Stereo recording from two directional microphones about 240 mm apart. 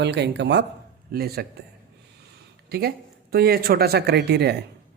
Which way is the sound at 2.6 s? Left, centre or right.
Right.